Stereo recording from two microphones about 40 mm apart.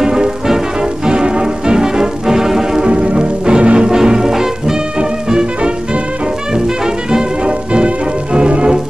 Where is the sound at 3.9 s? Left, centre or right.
Centre.